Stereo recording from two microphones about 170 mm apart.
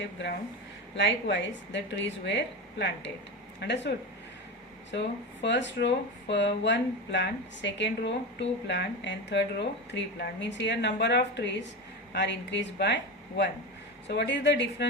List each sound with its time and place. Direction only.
0.9 s speech: 90° left